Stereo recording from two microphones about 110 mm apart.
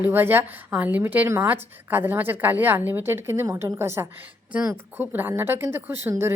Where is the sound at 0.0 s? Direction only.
20° right (ahead or behind).